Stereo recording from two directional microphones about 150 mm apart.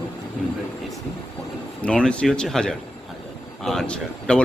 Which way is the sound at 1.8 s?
5° left (ahead or behind).